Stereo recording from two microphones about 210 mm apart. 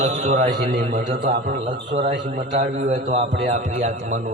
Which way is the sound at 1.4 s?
55° right (ahead or behind).